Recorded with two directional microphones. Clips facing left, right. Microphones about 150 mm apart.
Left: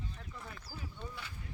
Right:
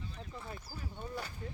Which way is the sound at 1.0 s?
40° right (ahead or behind).